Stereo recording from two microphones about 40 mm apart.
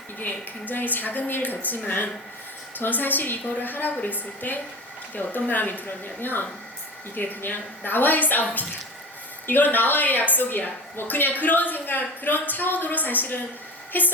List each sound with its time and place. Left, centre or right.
0.2 s a woman's voice: left